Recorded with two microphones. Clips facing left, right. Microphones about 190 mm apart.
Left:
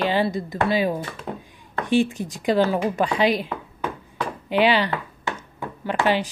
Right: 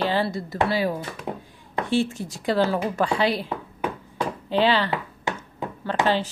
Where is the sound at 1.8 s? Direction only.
15° left (ahead or behind).